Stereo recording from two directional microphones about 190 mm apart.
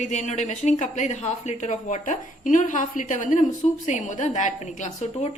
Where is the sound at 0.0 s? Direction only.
40° left (ahead or behind).